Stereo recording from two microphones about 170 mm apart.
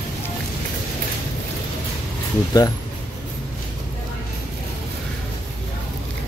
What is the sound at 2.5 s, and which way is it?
Speech, 25° left (ahead or behind).